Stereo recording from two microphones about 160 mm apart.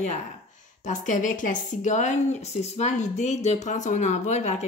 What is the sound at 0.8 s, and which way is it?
Speech, 55° left (ahead or behind).